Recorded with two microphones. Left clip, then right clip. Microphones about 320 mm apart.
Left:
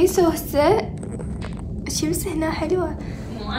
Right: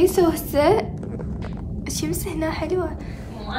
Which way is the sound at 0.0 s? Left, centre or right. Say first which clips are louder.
Even; centre.